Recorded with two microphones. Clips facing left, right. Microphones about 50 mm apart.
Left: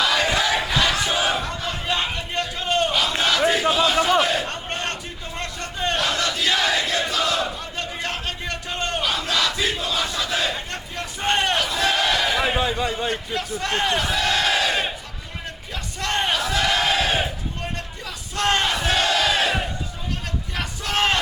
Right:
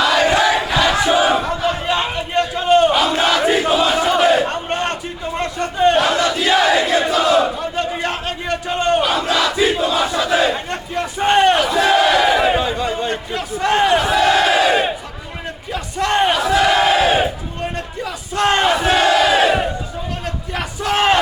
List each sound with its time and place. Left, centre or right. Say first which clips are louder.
0.0 s crowd: right 6 dB; centre
0.3 s crowd: right 7 dB; right
0.5 s battle cry: right 5 dB; centre
12.4 s a sound: right 5 dB; centre
13.1 s battle cry: right 3 dB; centre
20.2 s crowd: right 5 dB; centre